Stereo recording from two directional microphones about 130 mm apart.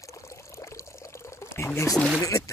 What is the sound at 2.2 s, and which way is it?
Speech, 25° left (ahead or behind).